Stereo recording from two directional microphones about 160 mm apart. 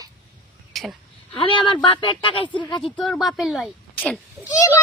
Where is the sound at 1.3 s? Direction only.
30° left (ahead or behind).